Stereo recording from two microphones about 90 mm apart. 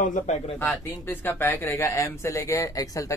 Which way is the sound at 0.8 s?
25° left (ahead or behind).